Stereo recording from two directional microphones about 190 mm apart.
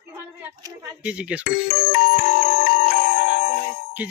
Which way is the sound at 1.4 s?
50° left (ahead or behind).